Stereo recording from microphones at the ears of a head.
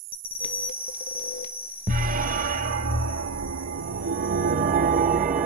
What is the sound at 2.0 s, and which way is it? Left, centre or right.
Music, right.